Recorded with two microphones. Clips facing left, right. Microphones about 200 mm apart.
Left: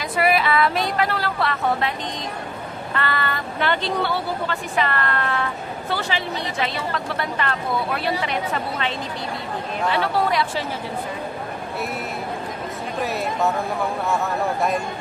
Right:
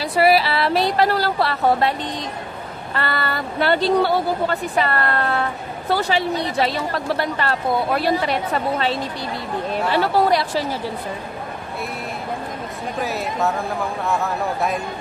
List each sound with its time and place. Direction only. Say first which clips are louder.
0.1 s a sound: right 3 dB; 35° right (ahead or behind)
2.9 s speech: right 1 dB; 35° right (ahead or behind)
9.9 s speech: right 5 dB; 40° right (ahead or behind)
13.0 s speech: even; centre (ahead or behind)